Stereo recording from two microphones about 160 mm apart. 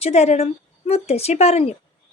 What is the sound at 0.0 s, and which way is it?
A woman's voice, 40° left (ahead or behind).